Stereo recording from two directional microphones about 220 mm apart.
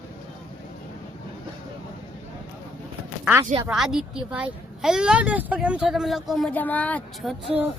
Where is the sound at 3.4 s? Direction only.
20° right (ahead or behind).